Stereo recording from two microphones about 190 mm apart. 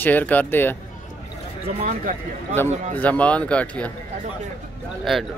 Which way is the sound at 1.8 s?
40° right (ahead or behind).